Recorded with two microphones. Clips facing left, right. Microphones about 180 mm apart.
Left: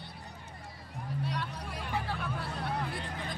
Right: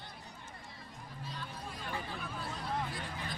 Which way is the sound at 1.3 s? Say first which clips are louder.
Left 7 dB; 75° left (ahead or behind).